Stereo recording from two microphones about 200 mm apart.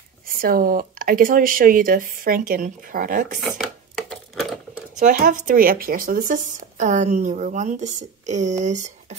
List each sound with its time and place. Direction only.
0.4 s speech: 45° right (ahead or behind)
3.5 s a sound: centre (ahead or behind)
5.0 s a woman's voice: 45° right (ahead or behind)